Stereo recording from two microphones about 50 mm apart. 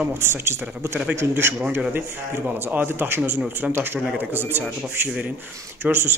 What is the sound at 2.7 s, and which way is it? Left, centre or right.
Speech, right.